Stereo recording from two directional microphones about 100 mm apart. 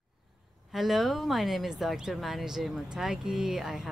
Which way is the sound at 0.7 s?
Centre (ahead or behind).